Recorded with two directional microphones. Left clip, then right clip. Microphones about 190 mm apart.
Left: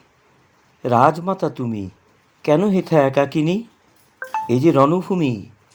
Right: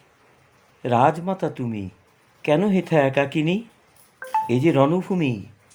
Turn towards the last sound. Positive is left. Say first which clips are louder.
# left 3 dB
turn(degrees=20)  # may be behind; listen again after turning